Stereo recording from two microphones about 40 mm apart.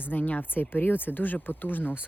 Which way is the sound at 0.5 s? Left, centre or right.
Left.